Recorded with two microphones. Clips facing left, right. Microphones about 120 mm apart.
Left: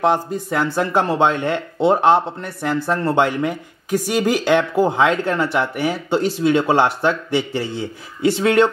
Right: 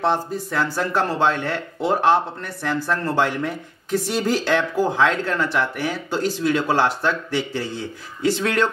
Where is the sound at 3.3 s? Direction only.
10° left (ahead or behind).